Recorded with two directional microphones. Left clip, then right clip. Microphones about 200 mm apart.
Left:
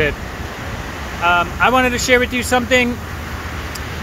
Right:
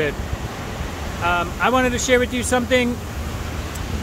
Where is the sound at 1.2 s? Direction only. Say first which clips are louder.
Left 6 dB; centre (ahead or behind).